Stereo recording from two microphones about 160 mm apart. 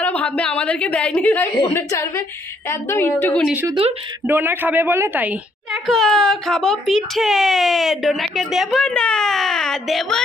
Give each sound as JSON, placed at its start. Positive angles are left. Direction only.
{"t": 0.0, "sound": "a woman's voice", "side_deg": 10}
{"t": 4.3, "sound": "a woman's voice", "side_deg": -10}
{"t": 5.9, "sound": "speech", "side_deg": 0}